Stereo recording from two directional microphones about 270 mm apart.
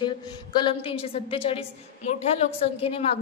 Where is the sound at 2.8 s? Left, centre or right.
Left.